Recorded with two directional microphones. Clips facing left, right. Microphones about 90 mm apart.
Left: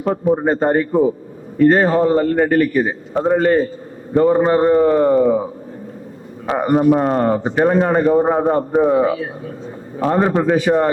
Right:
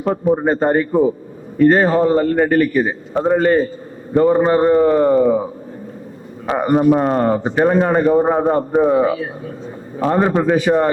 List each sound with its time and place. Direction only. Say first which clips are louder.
0.0 s a man's voice: even; 20° right (ahead or behind)
6.5 s a man's voice: even; 15° right (ahead or behind)